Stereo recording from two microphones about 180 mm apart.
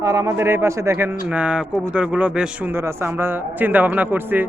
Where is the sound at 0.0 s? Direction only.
20° right (ahead or behind).